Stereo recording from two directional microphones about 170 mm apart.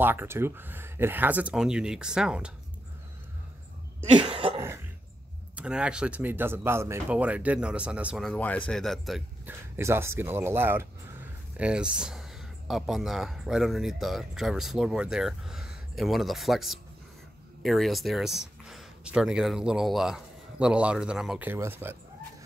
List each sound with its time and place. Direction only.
0.0 s speech: 10° right (ahead or behind)
4.1 s cough: 30° right (ahead or behind)
5.6 s speech: 5° right (ahead or behind)
9.5 s speech: 15° right (ahead or behind)